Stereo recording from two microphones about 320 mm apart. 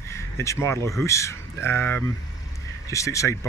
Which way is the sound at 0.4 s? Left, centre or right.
Centre.